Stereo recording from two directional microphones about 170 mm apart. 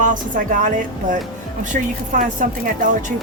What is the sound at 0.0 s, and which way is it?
Speech, 50° right (ahead or behind).